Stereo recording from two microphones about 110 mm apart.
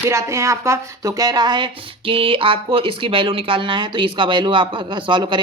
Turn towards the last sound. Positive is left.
turn(degrees=-45)  # may be behind; listen again after turning